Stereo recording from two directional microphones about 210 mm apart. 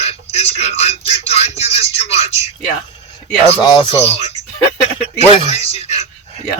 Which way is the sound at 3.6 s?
20° left (ahead or behind).